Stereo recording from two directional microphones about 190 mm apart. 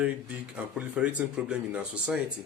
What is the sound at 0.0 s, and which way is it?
A man's voice, 5° right (ahead or behind).